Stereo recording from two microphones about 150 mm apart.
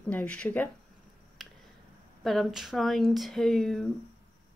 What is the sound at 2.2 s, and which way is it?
Speech, centre (ahead or behind).